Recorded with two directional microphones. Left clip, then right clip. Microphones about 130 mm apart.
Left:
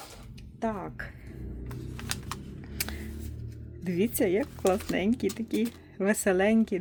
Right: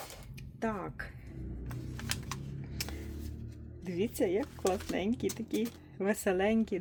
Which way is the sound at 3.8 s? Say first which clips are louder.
Left 5 dB; 30° left (ahead or behind).